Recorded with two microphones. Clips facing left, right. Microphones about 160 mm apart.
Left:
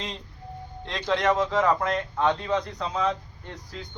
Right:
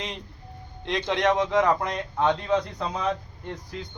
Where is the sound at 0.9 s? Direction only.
20° right (ahead or behind).